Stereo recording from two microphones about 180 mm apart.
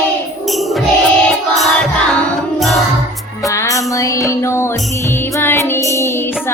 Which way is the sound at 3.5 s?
20° left (ahead or behind).